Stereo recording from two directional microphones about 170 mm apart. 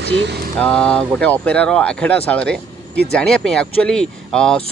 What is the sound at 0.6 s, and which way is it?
Speech, 5° left (ahead or behind).